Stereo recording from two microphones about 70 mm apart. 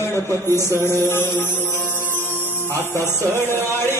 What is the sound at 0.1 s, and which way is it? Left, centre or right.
Speech, left.